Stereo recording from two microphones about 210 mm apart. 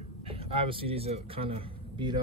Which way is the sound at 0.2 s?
25° right (ahead or behind).